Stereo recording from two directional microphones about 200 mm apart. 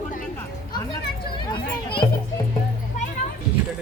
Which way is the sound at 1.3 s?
25° left (ahead or behind).